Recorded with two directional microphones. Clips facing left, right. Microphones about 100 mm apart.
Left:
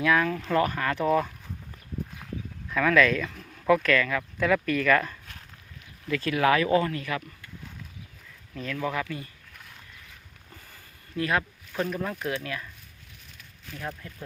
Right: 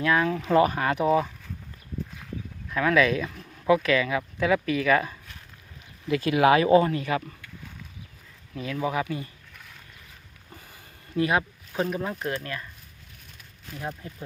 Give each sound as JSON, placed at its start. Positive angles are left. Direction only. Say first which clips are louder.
{"t": 0.0, "sound": "speech", "louder": "even", "side_deg": -5}
{"t": 2.6, "sound": "speech", "louder": "even", "side_deg": -5}
{"t": 8.7, "sound": "speech", "louder": "right 3 dB", "side_deg": -15}
{"t": 10.5, "sound": "a sound", "louder": "right 3 dB", "side_deg": -20}
{"t": 12.4, "sound": "speech", "louder": "even", "side_deg": 0}
{"t": 13.7, "sound": "speech", "louder": "right 2 dB", "side_deg": -20}